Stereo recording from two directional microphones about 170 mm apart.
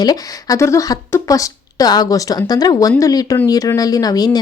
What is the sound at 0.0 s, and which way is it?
A woman's voice, 20° left (ahead or behind).